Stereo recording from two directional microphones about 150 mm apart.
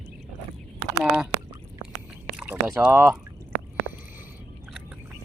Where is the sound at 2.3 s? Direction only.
10° right (ahead or behind).